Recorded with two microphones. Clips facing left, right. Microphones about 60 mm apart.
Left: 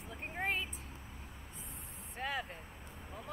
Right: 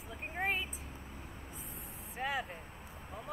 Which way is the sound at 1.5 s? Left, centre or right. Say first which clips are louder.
Right 3 dB; centre.